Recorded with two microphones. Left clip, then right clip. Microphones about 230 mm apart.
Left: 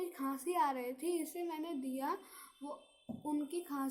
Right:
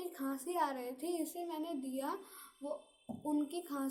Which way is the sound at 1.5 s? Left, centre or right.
Left.